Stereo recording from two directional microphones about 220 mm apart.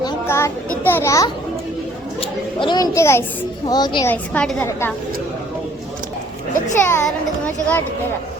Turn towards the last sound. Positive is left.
turn(degrees=10)  # may be behind; listen again after turning